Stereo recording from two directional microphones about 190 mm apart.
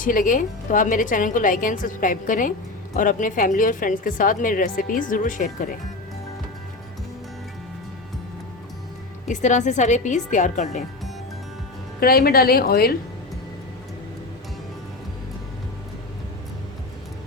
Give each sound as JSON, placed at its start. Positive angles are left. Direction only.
{"t": 0.0, "sound": "a woman's voice", "side_deg": 45}
{"t": 9.2, "sound": "a woman's voice", "side_deg": 40}
{"t": 11.9, "sound": "a woman's voice", "side_deg": 50}